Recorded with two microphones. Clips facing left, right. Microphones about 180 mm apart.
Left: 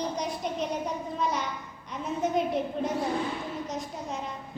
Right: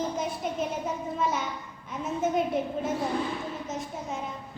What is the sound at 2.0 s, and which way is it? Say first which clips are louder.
A woman's voice: right 1 dB; centre (ahead or behind).